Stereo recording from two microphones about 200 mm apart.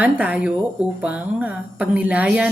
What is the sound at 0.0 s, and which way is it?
Speech, 5° right (ahead or behind).